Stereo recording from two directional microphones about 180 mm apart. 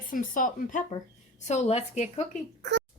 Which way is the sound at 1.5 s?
35° left (ahead or behind).